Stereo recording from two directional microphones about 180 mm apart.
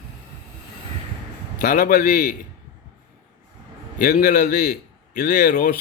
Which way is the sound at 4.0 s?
55° left (ahead or behind).